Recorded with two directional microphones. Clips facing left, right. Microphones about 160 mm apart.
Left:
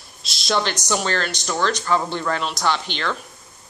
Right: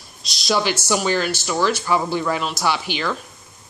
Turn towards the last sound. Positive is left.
turn(degrees=-5)  # may be behind; listen again after turning